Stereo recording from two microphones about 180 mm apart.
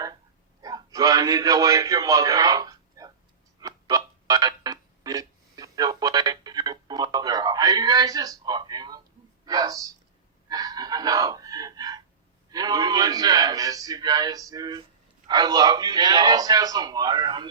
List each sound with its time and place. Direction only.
0.6 s a man's voice: 20° right (ahead or behind)
3.6 s music: 20° right (ahead or behind)
9.5 s a man's voice: 20° right (ahead or behind)
10.5 s a sound: 20° right (ahead or behind)
12.5 s a man's voice: 20° right (ahead or behind)